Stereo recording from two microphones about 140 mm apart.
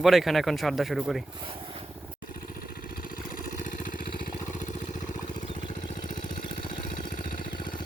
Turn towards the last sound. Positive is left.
turn(degrees=35)  # may be behind; listen again after turning